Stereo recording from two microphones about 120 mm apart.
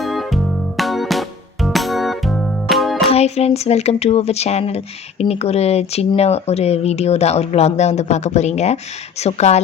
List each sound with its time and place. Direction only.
0.0 s music: centre (ahead or behind)
3.1 s speech: 60° left (ahead or behind)